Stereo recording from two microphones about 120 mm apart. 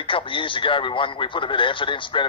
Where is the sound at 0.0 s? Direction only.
45° left (ahead or behind).